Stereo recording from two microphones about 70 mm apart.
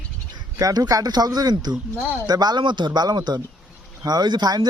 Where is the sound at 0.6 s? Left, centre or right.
Right.